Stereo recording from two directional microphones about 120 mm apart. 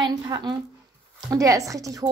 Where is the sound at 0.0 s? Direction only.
35° right (ahead or behind).